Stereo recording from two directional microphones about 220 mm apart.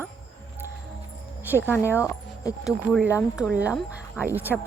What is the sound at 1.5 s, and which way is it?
Speech, 10° left (ahead or behind).